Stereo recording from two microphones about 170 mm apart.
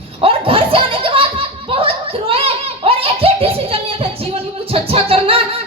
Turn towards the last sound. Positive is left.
turn(degrees=-35)  # may be behind; listen again after turning